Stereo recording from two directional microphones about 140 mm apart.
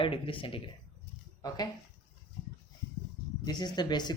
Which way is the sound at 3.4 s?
30° left (ahead or behind).